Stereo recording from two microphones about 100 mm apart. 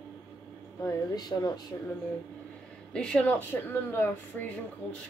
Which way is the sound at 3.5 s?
25° left (ahead or behind).